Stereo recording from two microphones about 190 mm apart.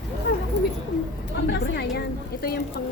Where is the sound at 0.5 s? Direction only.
65° left (ahead or behind).